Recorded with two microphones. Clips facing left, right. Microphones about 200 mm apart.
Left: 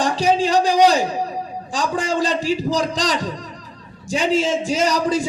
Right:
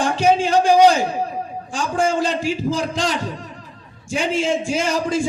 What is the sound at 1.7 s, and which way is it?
A man's voice, 35° left (ahead or behind).